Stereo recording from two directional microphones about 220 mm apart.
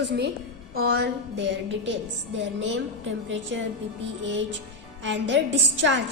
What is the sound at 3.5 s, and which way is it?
A woman's voice, 60° right (ahead or behind).